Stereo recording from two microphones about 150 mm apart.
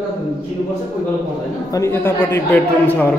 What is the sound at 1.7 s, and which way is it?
Speech, 15° left (ahead or behind).